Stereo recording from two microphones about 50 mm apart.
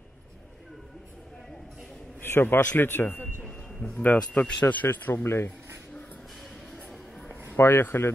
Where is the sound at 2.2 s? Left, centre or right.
Left.